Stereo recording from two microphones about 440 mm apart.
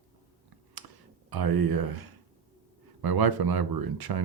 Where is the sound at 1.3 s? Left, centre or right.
Right.